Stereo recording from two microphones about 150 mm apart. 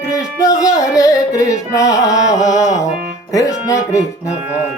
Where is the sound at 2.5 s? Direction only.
50° left (ahead or behind).